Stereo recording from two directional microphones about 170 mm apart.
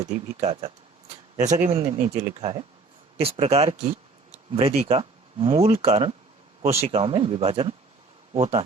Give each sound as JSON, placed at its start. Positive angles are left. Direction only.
{"t": 0.0, "sound": "speech", "side_deg": -35}
{"t": 1.4, "sound": "speech", "side_deg": -45}
{"t": 1.7, "sound": "speech", "side_deg": -35}